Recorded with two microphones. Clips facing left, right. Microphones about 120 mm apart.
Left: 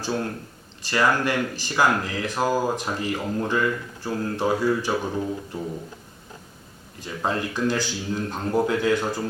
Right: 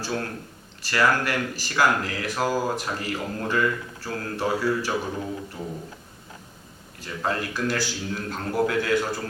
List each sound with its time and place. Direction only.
0.0 s speech: 20° left (ahead or behind)
7.0 s speech: 20° left (ahead or behind)